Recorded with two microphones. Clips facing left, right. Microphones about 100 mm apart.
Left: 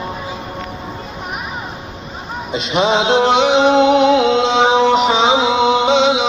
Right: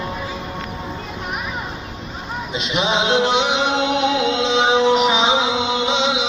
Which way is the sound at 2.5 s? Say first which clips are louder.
Left 5 dB; 35° left (ahead or behind).